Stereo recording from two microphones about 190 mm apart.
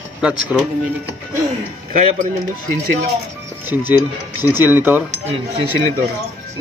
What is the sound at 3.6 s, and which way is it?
Speech, 10° right (ahead or behind).